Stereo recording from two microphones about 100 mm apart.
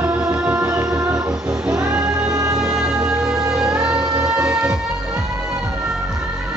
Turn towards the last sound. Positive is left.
turn(degrees=-10)  # may be behind; listen again after turning